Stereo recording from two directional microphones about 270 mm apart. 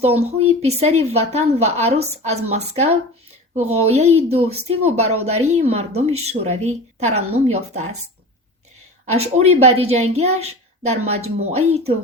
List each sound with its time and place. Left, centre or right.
0.0 s speech: right
7.1 s speech: right
7.3 s speech: right
9.1 s speech: right